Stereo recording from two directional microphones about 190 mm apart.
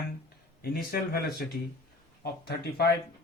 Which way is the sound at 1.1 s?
55° left (ahead or behind).